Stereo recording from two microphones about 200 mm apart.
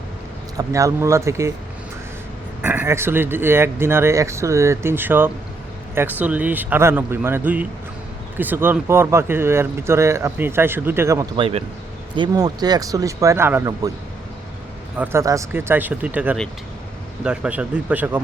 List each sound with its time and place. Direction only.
0.5 s speech: 15° right (ahead or behind)
2.6 s speech: 10° right (ahead or behind)
14.9 s speech: 10° right (ahead or behind)